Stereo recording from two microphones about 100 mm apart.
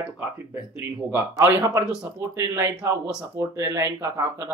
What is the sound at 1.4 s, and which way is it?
Speech, 25° right (ahead or behind).